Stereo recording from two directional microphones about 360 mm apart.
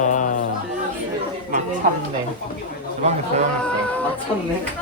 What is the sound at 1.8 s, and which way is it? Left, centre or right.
Speech, right.